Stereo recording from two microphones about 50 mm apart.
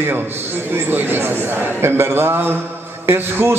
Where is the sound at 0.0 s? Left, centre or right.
Right.